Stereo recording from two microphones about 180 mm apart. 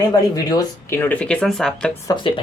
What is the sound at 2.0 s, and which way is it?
Speech, 25° left (ahead or behind).